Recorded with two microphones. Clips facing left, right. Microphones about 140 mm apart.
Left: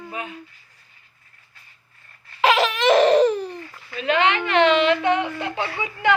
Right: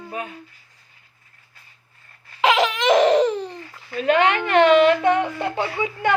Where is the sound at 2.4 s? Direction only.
15° right (ahead or behind).